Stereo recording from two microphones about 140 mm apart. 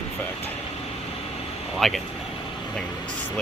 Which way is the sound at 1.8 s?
Centre (ahead or behind).